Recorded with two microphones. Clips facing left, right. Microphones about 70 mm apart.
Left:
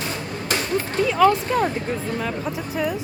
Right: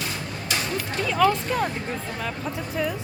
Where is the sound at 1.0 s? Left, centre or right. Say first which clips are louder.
Left 4 dB; centre.